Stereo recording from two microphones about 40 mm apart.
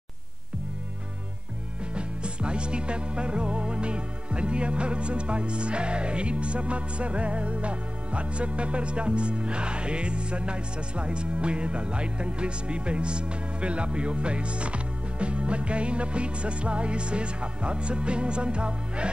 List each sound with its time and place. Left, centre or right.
2.0 s music: right